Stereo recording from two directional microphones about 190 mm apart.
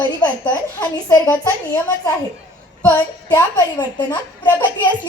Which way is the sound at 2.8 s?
15° left (ahead or behind).